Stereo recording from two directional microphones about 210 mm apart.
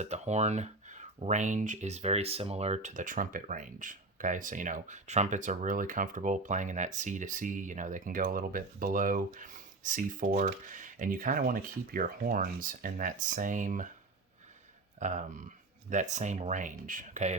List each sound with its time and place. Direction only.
0.0 s speech: 35° right (ahead or behind)
14.9 s speech: 35° right (ahead or behind)